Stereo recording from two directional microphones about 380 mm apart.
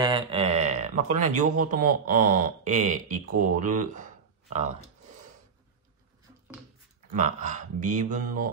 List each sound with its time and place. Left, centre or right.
0.0 s a sound: centre
1.3 s speech: centre
7.2 s speech: centre